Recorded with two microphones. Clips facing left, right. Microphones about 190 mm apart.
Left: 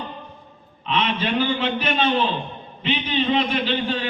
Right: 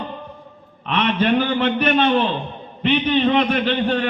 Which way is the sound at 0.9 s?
60° right (ahead or behind).